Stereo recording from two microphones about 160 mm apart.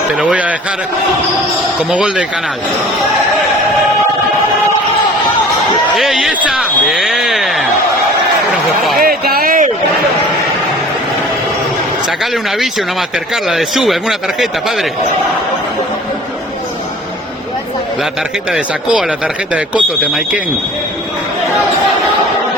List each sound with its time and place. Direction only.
0.2 s speech: 5° right (ahead or behind)
1.9 s speech: 5° right (ahead or behind)
6.0 s a sound: 5° right (ahead or behind)
9.0 s a sound: 70° right (ahead or behind)
12.2 s speech: centre (ahead or behind)
18.5 s speech: 5° right (ahead or behind)